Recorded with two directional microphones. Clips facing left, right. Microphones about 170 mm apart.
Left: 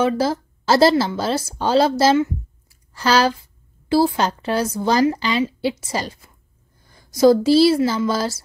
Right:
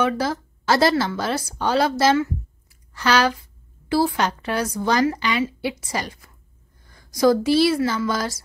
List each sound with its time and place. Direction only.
0.0 s a woman's voice: 30° left (ahead or behind)
2.7 s a sound: 30° left (ahead or behind)
3.9 s a woman's voice: 30° left (ahead or behind)